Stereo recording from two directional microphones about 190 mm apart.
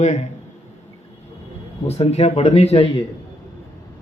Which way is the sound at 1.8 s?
35° left (ahead or behind).